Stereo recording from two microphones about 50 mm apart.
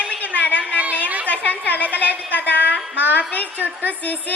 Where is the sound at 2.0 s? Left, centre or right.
Right.